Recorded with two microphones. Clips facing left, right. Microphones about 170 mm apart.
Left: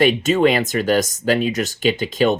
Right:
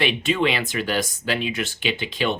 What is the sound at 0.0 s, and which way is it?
Speech, 45° left (ahead or behind).